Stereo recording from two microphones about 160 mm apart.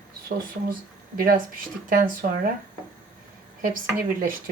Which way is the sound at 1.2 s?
65° right (ahead or behind).